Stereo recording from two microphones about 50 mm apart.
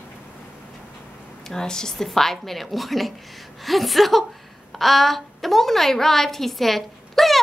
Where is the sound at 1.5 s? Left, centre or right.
Centre.